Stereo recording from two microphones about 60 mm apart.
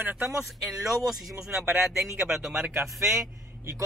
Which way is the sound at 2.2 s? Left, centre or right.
Centre.